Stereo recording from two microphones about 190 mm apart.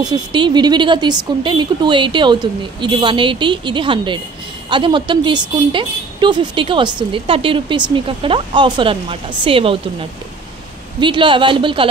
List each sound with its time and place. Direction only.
0.0 s a woman's voice: 25° right (ahead or behind)
11.0 s a woman's voice: 25° right (ahead or behind)